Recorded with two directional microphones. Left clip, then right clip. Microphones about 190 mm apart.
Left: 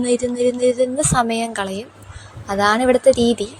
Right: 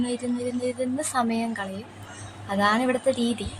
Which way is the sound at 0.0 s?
35° left (ahead or behind).